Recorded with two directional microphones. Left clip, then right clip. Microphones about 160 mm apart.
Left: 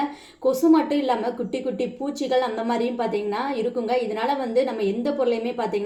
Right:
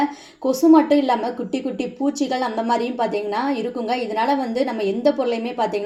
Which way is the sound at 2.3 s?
30° right (ahead or behind).